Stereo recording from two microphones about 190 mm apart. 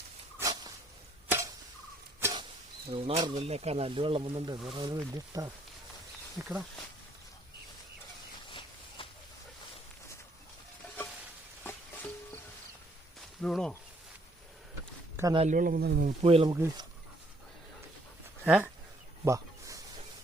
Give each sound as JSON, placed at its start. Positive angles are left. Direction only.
{"t": 0.3, "sound": "dog", "side_deg": -20}
{"t": 1.3, "sound": "tick-tock", "side_deg": -15}
{"t": 2.9, "sound": "speech", "side_deg": -30}
{"t": 6.4, "sound": "speech", "side_deg": -5}
{"t": 8.4, "sound": "a sound", "side_deg": 25}
{"t": 11.6, "sound": "music", "side_deg": 10}
{"t": 13.4, "sound": "speech", "side_deg": 5}
{"t": 15.1, "sound": "a sound", "side_deg": -15}
{"t": 15.4, "sound": "speech", "side_deg": -45}
{"t": 16.0, "sound": "speech", "side_deg": -30}
{"t": 16.6, "sound": "speech", "side_deg": -15}
{"t": 18.4, "sound": "speech", "side_deg": -5}
{"t": 19.2, "sound": "a sound", "side_deg": -15}